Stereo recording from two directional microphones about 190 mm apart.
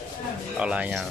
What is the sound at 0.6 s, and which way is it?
Speech, 5° right (ahead or behind).